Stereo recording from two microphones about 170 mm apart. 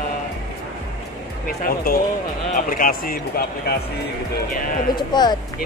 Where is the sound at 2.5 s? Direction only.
55° left (ahead or behind).